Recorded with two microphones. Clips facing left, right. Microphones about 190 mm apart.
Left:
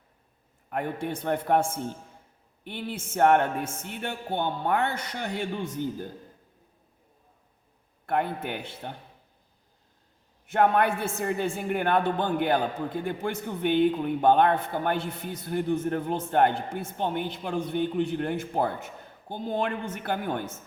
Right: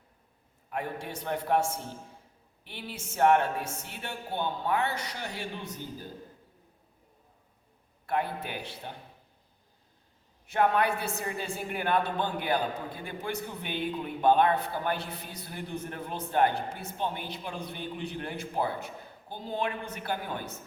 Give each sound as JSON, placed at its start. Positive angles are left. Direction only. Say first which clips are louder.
{"t": 0.7, "sound": "a man's voice", "louder": "left 5 dB", "side_deg": 55}
{"t": 8.0, "sound": "a man's voice", "louder": "left 3 dB", "side_deg": 55}
{"t": 10.5, "sound": "a man's voice", "louder": "left 3 dB", "side_deg": 50}